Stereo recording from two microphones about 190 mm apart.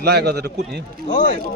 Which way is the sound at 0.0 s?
60° right (ahead or behind).